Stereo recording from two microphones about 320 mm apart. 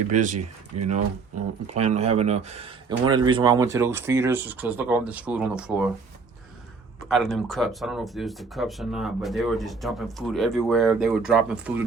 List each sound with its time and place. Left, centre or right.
0.1 s speech: right
1.6 s speech: right; by 5.9 s centre
7.1 s speech: centre